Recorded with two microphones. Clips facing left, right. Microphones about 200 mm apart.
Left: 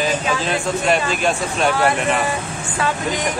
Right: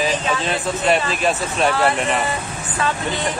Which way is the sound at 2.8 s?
15° left (ahead or behind).